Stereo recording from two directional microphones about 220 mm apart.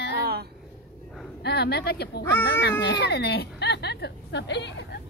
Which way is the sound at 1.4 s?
50° left (ahead or behind).